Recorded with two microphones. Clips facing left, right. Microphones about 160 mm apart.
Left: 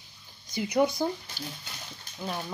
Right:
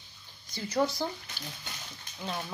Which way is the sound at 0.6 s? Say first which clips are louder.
Left 4 dB; 15° left (ahead or behind).